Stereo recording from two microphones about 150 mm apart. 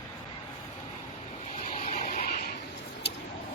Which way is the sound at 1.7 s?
50° left (ahead or behind).